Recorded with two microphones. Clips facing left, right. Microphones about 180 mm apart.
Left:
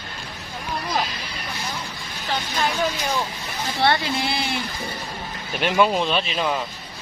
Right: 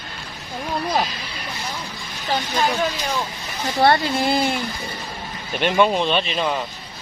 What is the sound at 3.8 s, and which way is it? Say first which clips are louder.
Speech: right 4 dB; 45° right (ahead or behind).